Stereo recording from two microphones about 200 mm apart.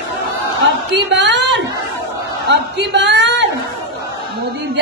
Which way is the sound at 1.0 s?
60° right (ahead or behind).